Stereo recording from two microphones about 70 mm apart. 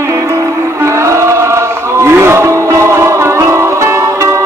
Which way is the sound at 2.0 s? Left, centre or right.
Right.